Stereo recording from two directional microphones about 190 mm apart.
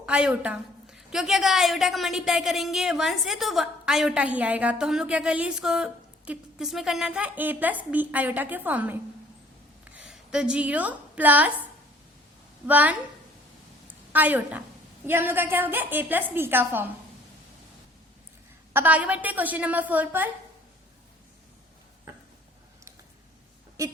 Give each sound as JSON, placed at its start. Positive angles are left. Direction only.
{"t": 0.0, "sound": "a woman's voice", "side_deg": -5}
{"t": 13.8, "sound": "a sound", "side_deg": -10}
{"t": 15.0, "sound": "a woman's voice", "side_deg": -10}
{"t": 18.7, "sound": "a woman's voice", "side_deg": -10}
{"t": 23.8, "sound": "a woman's voice", "side_deg": -15}